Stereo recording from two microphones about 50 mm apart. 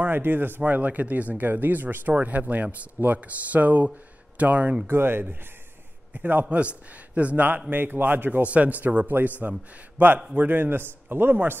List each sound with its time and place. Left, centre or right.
0.0 s speech: right
0.6 s speech: right
4.8 s a man's voice: right
6.5 s speech: right
7.7 s a man's voice: right